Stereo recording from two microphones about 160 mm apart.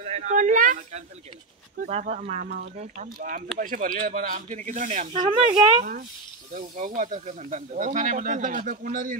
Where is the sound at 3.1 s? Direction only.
55° right (ahead or behind).